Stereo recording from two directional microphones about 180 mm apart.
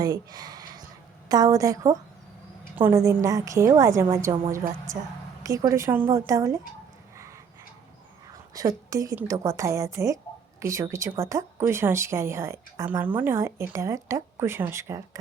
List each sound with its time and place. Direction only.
0.0 s a sound: 20° right (ahead or behind)
1.3 s a woman's voice: 20° right (ahead or behind)
8.5 s a woman's voice: 20° right (ahead or behind)